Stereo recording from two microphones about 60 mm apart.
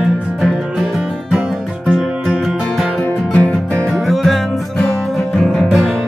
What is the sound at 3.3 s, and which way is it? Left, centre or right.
Music, left.